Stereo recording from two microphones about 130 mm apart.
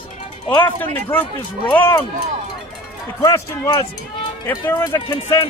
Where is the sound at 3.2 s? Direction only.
25° left (ahead or behind).